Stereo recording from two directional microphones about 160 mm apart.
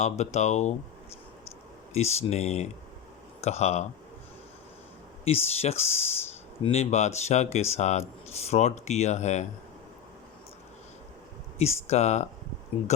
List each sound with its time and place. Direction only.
0.0 s speech: 45° left (ahead or behind)
1.9 s speech: 40° left (ahead or behind)
5.2 s speech: 40° left (ahead or behind)
11.6 s speech: 45° left (ahead or behind)